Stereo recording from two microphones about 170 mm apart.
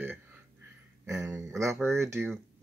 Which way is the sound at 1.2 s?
20° right (ahead or behind).